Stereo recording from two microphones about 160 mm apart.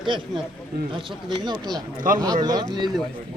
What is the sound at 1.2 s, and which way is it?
Speech, 25° right (ahead or behind).